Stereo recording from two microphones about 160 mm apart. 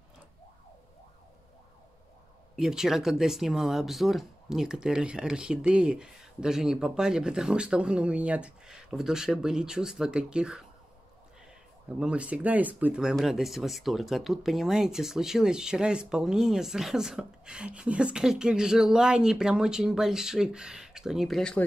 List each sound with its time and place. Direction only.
2.5 s speech: 5° right (ahead or behind)
12.0 s speech: 5° right (ahead or behind)